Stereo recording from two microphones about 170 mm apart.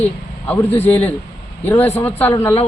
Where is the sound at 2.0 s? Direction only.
10° left (ahead or behind).